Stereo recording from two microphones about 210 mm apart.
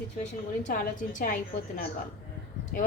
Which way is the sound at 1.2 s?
40° left (ahead or behind).